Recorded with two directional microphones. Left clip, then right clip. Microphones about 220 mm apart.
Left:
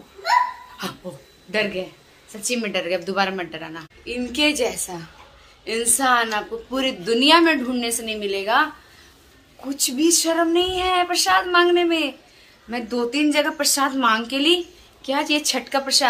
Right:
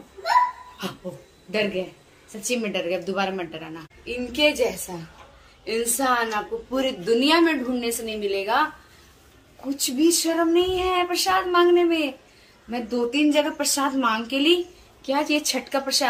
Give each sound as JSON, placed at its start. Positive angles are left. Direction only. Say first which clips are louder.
{"t": 0.8, "sound": "a sound", "louder": "left 2 dB", "side_deg": 0}
{"t": 1.5, "sound": "a woman's voice", "louder": "left 2 dB", "side_deg": 0}
{"t": 9.7, "sound": "a woman's voice", "louder": "left 1 dB", "side_deg": 5}